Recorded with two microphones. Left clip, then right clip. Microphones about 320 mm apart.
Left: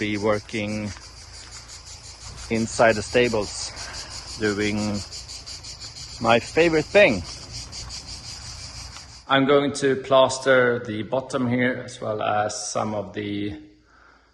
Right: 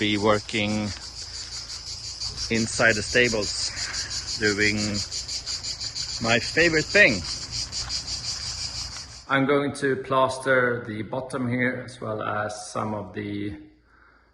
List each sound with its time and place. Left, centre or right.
0.0 s a man's voice: centre
2.5 s speech: centre
6.2 s speech: centre
9.3 s a man's voice: centre